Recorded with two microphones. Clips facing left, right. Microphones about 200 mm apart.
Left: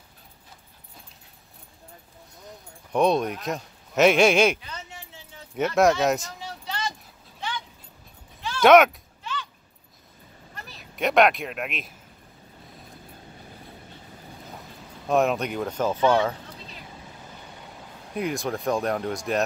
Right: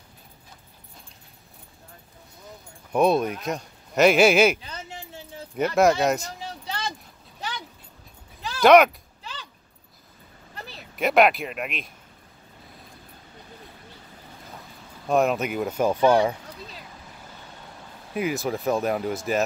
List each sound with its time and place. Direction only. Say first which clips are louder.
2.9 s speech: right 1 dB; 5° right (ahead or behind)
5.6 s speech: right 1 dB; centre (ahead or behind)
8.5 s speech: even; centre (ahead or behind)
9.2 s a sound: left 6 dB; 35° right (ahead or behind)
11.0 s speech: right 1 dB; centre (ahead or behind)
15.0 s speech: right 1 dB; centre (ahead or behind)
18.1 s speech: right 2 dB; 5° right (ahead or behind)